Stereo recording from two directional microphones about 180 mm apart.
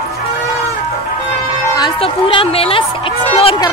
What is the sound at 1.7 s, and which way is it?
Music, 25° left (ahead or behind).